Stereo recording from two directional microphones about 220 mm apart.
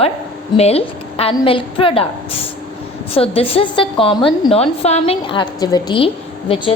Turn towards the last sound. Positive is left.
turn(degrees=25)  # may be behind; listen again after turning